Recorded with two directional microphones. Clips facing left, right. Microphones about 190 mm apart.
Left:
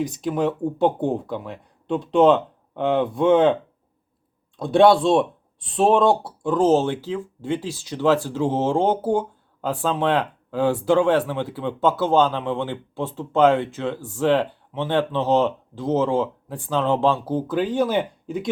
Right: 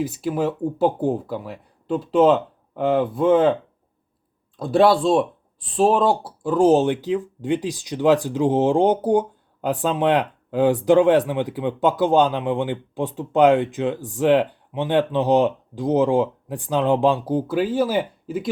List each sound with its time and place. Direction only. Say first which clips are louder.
0.0 s speech: even; 5° right (ahead or behind)